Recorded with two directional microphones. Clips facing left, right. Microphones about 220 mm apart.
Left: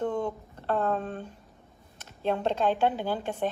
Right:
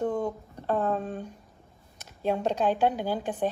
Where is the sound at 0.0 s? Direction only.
10° right (ahead or behind).